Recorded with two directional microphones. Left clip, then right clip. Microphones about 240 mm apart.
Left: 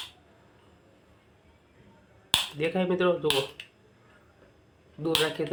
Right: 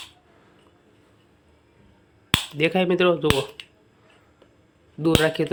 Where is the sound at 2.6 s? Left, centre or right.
Right.